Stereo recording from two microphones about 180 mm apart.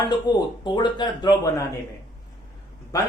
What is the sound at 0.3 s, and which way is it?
A man's voice, 25° left (ahead or behind).